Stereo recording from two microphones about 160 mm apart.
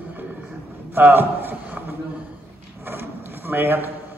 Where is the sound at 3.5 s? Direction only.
15° right (ahead or behind).